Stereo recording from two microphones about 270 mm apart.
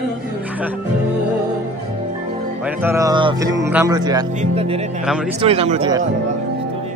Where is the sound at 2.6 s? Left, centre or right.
Centre.